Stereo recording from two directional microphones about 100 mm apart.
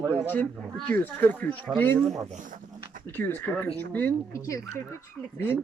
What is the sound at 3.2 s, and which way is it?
Speech, 20° left (ahead or behind).